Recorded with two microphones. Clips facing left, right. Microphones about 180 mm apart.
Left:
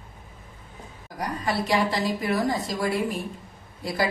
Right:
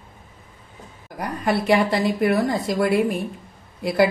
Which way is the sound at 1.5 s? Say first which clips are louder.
Right 6 dB; 55° right (ahead or behind).